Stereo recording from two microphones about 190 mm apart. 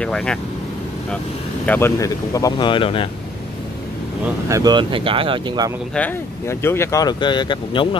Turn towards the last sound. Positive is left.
turn(degrees=25)  # may be behind; listen again after turning